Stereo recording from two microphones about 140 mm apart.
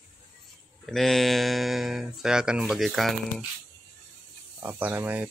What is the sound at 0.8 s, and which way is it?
Speech, centre (ahead or behind).